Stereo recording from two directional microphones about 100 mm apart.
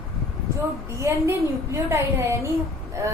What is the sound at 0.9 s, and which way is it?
A woman's voice, 30° right (ahead or behind).